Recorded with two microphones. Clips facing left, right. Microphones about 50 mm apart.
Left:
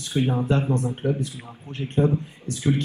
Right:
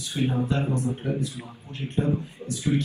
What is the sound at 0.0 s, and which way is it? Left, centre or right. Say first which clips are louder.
A man's voice: left 2 dB; left.